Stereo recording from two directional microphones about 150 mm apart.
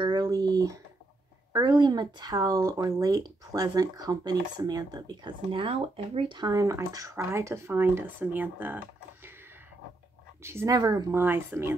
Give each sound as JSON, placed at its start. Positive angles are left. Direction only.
{"t": 0.0, "sound": "a sound", "side_deg": -30}
{"t": 1.5, "sound": "speech", "side_deg": -25}
{"t": 10.4, "sound": "speech", "side_deg": -20}